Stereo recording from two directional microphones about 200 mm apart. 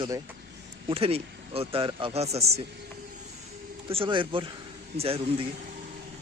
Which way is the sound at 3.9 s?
25° right (ahead or behind).